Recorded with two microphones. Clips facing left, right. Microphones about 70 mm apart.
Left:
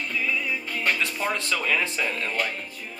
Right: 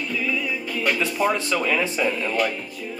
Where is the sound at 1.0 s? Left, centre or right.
Centre.